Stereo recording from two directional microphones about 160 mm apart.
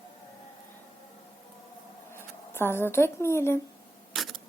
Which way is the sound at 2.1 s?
15° left (ahead or behind).